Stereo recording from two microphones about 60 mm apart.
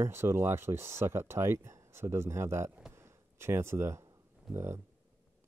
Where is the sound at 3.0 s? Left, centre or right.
Right.